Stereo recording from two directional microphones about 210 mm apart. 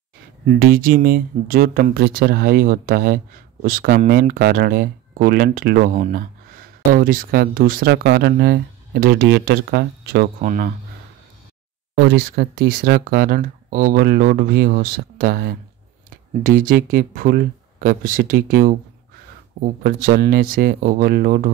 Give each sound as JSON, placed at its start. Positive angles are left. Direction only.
{"t": 0.5, "sound": "speech", "side_deg": -45}
{"t": 11.9, "sound": "speech", "side_deg": -55}